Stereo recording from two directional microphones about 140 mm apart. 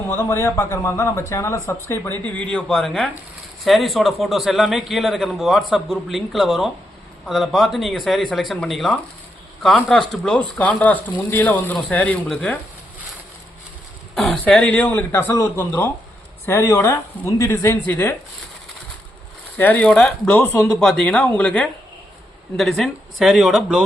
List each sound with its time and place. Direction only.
0.1 s a man's voice: 20° left (ahead or behind)
14.2 s a man's voice: 5° left (ahead or behind)
19.5 s a man's voice: 10° left (ahead or behind); by 23.8 s 5° right (ahead or behind)